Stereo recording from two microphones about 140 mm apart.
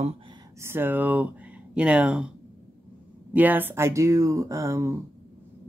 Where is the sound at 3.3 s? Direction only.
15° right (ahead or behind).